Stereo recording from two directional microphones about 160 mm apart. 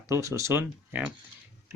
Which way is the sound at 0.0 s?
20° right (ahead or behind).